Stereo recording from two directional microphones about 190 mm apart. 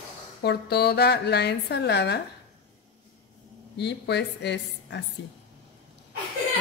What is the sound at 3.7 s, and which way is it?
A woman's voice, 65° left (ahead or behind).